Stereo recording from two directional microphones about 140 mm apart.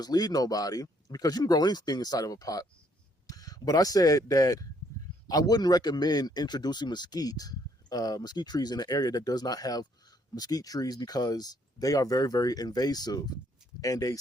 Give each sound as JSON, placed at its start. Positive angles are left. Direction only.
{"t": 0.0, "sound": "speech", "side_deg": 30}